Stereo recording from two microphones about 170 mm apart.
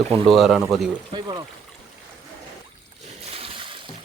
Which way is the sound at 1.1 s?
25° right (ahead or behind).